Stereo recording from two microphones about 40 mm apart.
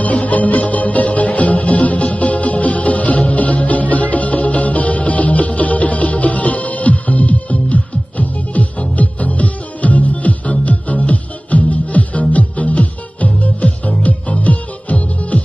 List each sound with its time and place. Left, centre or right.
0.0 s music: left